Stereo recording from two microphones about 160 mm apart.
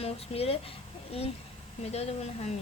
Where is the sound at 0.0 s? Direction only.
40° left (ahead or behind).